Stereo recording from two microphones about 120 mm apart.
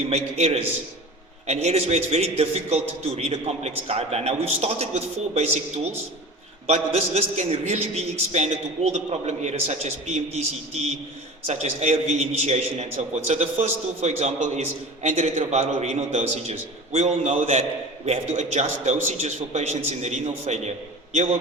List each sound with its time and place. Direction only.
0.1 s a man's voice: 60° right (ahead or behind); by 17.6 s 75° right (ahead or behind)
18.0 s a man's voice: 65° right (ahead or behind)